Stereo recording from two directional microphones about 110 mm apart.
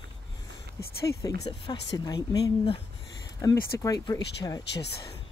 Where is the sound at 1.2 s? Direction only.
35° left (ahead or behind).